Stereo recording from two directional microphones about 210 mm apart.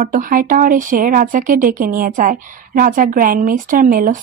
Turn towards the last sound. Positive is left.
turn(degrees=-40)  # may be behind; listen again after turning